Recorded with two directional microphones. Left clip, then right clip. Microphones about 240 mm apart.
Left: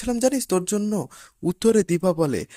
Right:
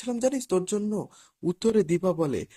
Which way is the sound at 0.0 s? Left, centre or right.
Left.